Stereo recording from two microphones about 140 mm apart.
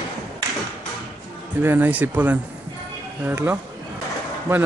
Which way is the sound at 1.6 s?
15° right (ahead or behind).